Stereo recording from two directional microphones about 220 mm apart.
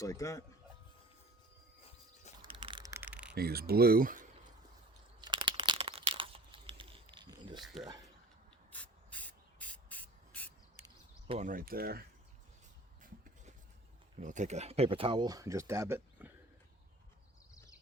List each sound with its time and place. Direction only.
0.0 s speech: 15° left (ahead or behind)
2.5 s a sound: 20° right (ahead or behind); by 3.3 s 5° right (ahead or behind)
3.3 s speech: 45° right (ahead or behind)
5.2 s crumpling: 20° right (ahead or behind)
7.6 s speech: centre (ahead or behind)
8.7 s spray: 5° left (ahead or behind)
11.3 s speech: 35° right (ahead or behind)
13.0 s a sound: 40° right (ahead or behind)
14.2 s speech: 35° right (ahead or behind); by 16.3 s 10° right (ahead or behind)